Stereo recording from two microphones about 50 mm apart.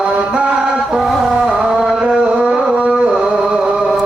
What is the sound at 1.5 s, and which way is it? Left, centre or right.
Music, centre.